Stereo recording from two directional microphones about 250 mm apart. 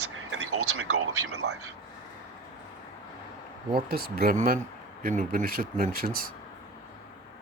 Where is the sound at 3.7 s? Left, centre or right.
Right.